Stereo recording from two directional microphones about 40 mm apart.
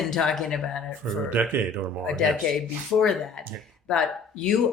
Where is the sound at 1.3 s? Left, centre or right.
Right.